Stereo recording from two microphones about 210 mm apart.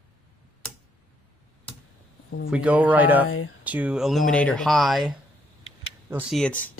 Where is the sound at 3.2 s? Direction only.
85° left.